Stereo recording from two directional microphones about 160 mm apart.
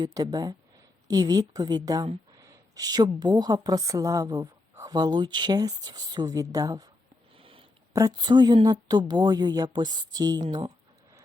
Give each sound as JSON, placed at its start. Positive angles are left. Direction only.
{"t": 0.0, "sound": "a woman's voice", "side_deg": -25}
{"t": 7.3, "sound": "a sound", "side_deg": -35}
{"t": 7.9, "sound": "a woman's voice", "side_deg": -25}